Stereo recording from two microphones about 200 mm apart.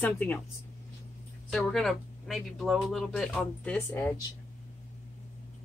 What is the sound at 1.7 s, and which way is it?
Speech, centre (ahead or behind).